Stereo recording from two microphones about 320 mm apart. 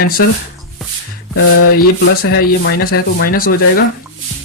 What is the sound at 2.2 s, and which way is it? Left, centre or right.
Speech, left.